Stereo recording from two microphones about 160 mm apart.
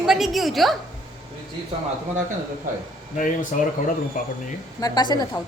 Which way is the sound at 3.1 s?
55° left (ahead or behind).